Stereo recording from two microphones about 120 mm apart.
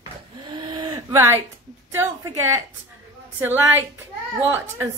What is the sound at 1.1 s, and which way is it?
Speech, 20° right (ahead or behind).